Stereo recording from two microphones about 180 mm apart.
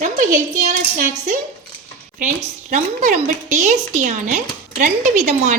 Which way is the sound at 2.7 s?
45° right (ahead or behind).